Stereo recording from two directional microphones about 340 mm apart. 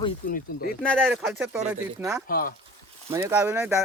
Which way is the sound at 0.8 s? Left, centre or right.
Centre.